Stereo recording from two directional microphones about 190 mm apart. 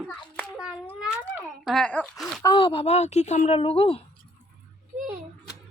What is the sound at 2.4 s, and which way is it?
Speech, 25° left (ahead or behind).